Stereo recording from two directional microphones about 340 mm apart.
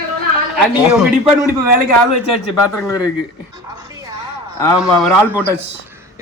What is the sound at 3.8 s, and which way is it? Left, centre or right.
Music, centre.